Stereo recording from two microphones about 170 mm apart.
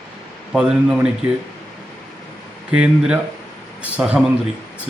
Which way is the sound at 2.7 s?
5° right (ahead or behind).